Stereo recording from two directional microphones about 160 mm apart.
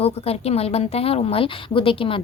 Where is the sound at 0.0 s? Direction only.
40° left (ahead or behind).